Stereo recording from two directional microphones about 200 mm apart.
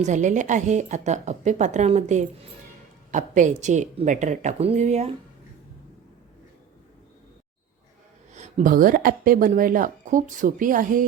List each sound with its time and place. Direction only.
0.0 s a woman's voice: 40° right (ahead or behind)
8.3 s speech: 35° right (ahead or behind)